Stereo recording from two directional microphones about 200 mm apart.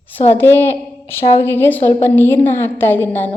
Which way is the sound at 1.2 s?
30° left (ahead or behind).